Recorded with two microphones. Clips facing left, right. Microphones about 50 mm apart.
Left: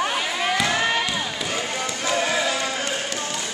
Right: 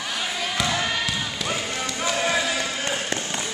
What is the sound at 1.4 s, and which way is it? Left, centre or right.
Run, centre.